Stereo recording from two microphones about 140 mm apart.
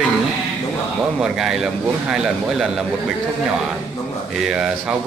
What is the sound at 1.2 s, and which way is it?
A man's voice, 5° right (ahead or behind).